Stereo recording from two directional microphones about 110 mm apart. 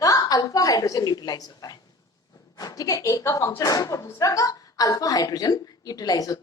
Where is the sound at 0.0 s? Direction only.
35° left (ahead or behind).